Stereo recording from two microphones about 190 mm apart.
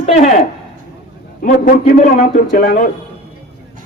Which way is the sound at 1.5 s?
45° left (ahead or behind).